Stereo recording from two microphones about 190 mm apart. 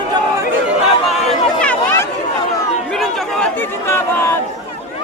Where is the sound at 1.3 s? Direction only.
5° left (ahead or behind).